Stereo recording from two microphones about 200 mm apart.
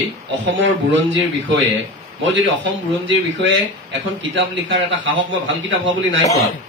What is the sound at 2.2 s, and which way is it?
Speech, 70° right (ahead or behind).